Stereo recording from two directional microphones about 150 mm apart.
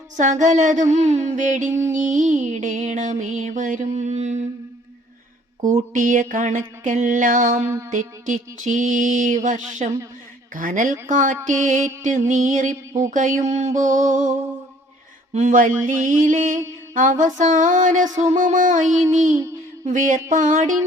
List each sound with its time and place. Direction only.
0.2 s music: 55° right (ahead or behind)
5.6 s music: 60° right (ahead or behind)
7.6 s a sound: 20° right (ahead or behind)
7.9 s music: 60° right (ahead or behind)
19.3 s a sound: 10° right (ahead or behind)
19.8 s music: 55° right (ahead or behind)